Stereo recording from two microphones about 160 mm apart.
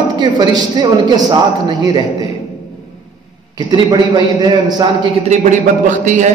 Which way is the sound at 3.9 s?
25° right (ahead or behind).